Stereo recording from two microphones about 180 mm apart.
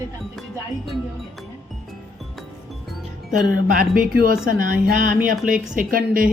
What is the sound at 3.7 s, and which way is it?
Speech, 50° right (ahead or behind).